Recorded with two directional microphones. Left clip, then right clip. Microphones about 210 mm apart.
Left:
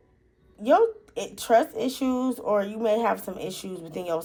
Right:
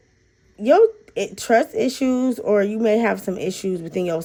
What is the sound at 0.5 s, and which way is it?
Speech, 45° right (ahead or behind).